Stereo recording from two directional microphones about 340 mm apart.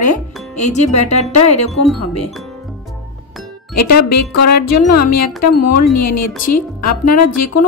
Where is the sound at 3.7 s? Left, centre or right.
Left.